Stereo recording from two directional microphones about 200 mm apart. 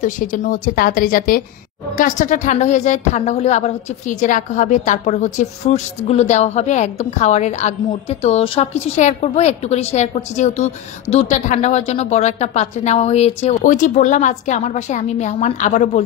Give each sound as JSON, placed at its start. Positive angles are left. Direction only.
{"t": 0.0, "sound": "a woman's voice", "side_deg": 40}